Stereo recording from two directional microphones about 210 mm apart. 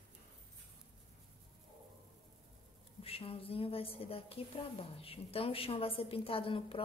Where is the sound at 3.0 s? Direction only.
25° left (ahead or behind).